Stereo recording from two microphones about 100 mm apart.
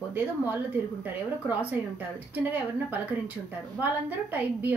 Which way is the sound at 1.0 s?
20° right (ahead or behind).